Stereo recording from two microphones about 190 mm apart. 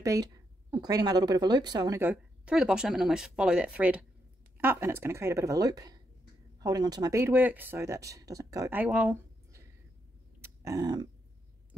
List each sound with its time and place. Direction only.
0.0 s a woman's voice: 20° right (ahead or behind)
10.4 s dog: 15° right (ahead or behind)